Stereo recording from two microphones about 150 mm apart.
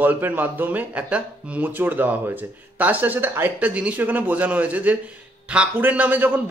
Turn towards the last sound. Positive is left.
turn(degrees=-10)  # may be behind; listen again after turning